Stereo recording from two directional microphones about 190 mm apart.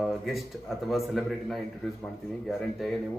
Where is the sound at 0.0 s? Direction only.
Centre (ahead or behind).